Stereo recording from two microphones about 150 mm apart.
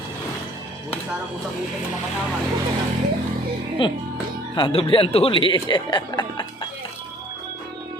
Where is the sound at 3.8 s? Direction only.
35° left (ahead or behind).